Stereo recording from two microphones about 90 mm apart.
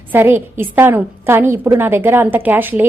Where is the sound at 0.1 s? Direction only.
25° right (ahead or behind).